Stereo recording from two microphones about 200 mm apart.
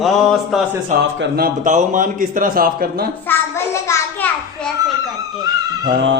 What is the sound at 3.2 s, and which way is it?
A child's voice, 15° left (ahead or behind).